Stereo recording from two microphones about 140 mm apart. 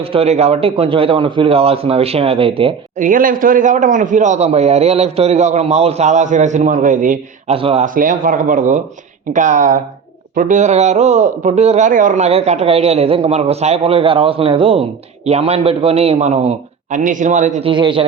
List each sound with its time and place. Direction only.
0.0 s a man's voice: 45° right (ahead or behind)
3.0 s a man's voice: 75° right (ahead or behind)
7.4 s speech: 45° right (ahead or behind)
7.9 s a man's voice: 75° right (ahead or behind); by 11.9 s 50° right (ahead or behind)
11.9 s a man's voice: 70° right (ahead or behind); by 17.0 s 50° right (ahead or behind)
17.0 s a man's voice: 65° right (ahead or behind)
17.6 s a man's voice: 35° right (ahead or behind)